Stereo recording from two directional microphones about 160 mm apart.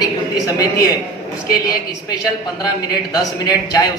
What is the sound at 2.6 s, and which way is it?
A man's voice, 25° left (ahead or behind).